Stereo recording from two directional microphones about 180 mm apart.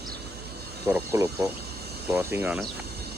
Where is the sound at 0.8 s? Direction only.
15° right (ahead or behind).